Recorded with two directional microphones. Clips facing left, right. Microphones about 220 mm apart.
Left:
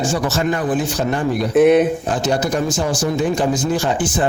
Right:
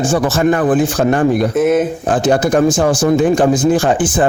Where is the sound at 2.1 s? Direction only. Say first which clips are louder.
Right 6 dB; 50° right (ahead or behind).